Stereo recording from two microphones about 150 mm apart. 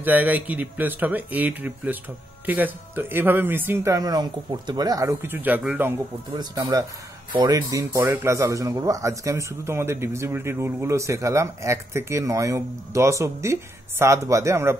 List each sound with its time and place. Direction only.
0.0 s speech: 10° right (ahead or behind)
6.3 s speech: 25° right (ahead or behind)